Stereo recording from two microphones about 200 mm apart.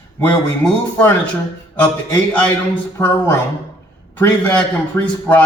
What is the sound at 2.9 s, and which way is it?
A man's voice, 10° left (ahead or behind).